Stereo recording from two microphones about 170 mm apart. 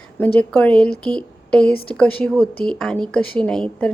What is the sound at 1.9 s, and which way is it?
A woman's voice, 5° left (ahead or behind).